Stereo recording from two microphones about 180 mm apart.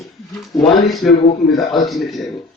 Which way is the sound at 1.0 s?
5° left (ahead or behind).